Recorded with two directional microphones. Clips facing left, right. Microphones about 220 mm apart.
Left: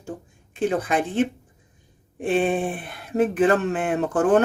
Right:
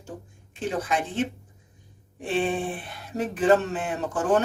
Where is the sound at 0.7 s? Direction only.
55° left (ahead or behind).